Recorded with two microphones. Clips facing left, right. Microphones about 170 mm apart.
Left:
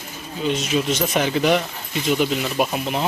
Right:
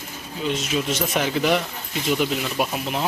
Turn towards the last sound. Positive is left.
turn(degrees=0)  # may be behind; listen again after turning